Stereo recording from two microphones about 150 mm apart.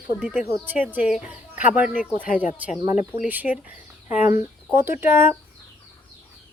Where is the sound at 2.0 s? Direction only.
65° left (ahead or behind).